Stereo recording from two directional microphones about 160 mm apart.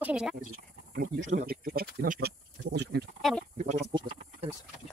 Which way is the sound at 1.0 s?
65° right (ahead or behind).